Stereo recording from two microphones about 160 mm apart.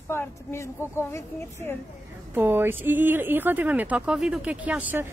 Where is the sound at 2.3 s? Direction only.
15° right (ahead or behind).